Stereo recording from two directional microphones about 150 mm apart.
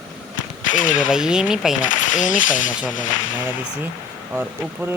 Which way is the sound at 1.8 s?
60° left (ahead or behind).